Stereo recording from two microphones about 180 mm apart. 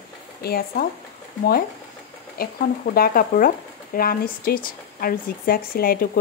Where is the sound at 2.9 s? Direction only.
55° left (ahead or behind).